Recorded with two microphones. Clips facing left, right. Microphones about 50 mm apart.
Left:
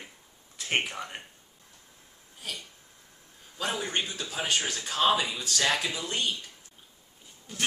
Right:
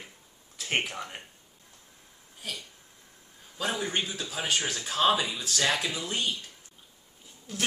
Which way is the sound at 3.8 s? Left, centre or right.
Centre.